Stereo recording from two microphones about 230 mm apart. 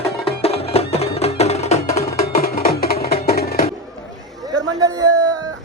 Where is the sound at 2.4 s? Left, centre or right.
Left.